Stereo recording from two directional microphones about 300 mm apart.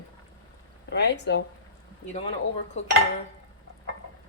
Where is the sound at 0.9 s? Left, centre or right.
Left.